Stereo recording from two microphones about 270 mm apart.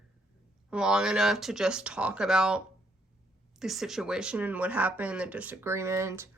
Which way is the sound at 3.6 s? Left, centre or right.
Centre.